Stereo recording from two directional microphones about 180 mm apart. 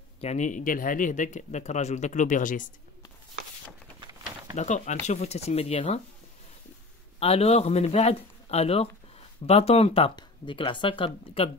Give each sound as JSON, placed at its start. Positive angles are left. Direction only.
{"t": 0.2, "sound": "speech", "side_deg": 40}
{"t": 4.0, "sound": "a sound", "side_deg": -20}
{"t": 4.6, "sound": "speech", "side_deg": 40}
{"t": 7.2, "sound": "speech", "side_deg": 35}